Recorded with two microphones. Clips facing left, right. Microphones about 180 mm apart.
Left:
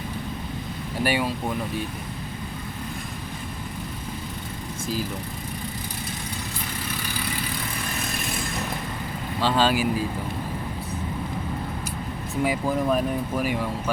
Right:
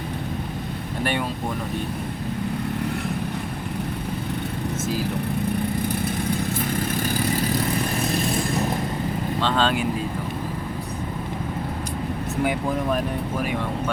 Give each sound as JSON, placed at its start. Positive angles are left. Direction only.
{"t": 1.0, "sound": "speech", "side_deg": 5}
{"t": 6.9, "sound": "vehicle", "side_deg": -45}
{"t": 9.4, "sound": "speech", "side_deg": 5}
{"t": 12.4, "sound": "speech", "side_deg": 0}